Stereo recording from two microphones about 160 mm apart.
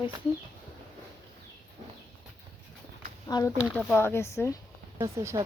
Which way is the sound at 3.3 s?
20° left (ahead or behind).